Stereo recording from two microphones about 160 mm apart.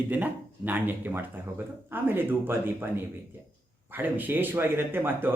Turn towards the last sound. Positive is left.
turn(degrees=-15)  # may be behind; listen again after turning